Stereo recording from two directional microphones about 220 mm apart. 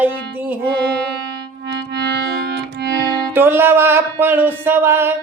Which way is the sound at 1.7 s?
50° right (ahead or behind).